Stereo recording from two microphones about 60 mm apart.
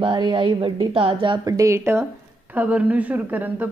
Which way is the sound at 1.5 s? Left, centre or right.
Right.